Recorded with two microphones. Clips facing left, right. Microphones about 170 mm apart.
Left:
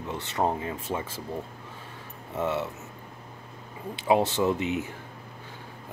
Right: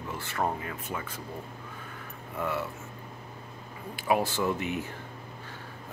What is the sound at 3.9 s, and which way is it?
Speech, 25° left (ahead or behind).